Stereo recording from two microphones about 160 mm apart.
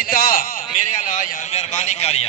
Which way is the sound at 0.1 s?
65° left (ahead or behind).